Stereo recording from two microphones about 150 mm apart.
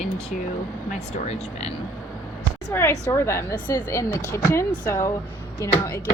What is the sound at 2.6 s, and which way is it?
Speech, 15° left (ahead or behind).